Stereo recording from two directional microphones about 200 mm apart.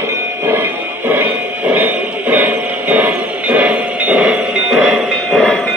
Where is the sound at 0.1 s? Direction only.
10° right (ahead or behind).